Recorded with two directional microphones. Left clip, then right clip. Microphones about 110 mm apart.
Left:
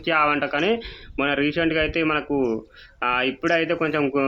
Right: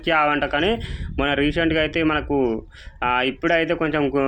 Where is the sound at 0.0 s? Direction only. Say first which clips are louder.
Right 1 dB; 30° right (ahead or behind).